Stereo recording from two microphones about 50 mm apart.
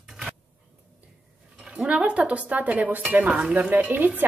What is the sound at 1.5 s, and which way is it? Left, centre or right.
Speech, centre.